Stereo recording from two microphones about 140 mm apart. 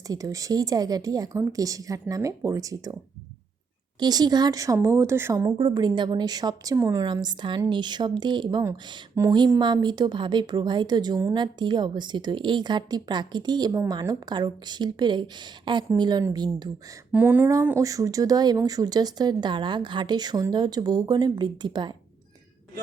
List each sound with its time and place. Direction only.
0.1 s speech: 25° right (ahead or behind)
4.0 s speech: 30° right (ahead or behind)
5.5 s a woman's voice: 30° right (ahead or behind)
7.0 s a woman's voice: 30° right (ahead or behind)
17.1 s speech: 10° right (ahead or behind); by 21.9 s 35° right (ahead or behind)